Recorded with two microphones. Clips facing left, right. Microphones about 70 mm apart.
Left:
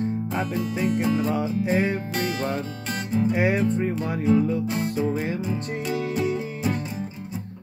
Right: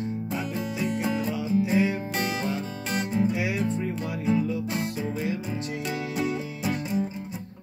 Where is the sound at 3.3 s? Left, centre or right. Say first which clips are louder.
Left 5 dB; left.